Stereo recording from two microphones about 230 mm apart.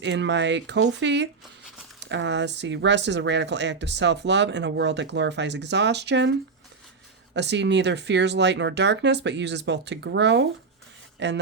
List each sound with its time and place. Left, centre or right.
0.0 s speech: right
7.3 s speech: right